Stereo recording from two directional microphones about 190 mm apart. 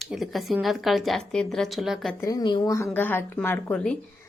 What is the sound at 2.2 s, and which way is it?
A woman's voice, 20° left (ahead or behind).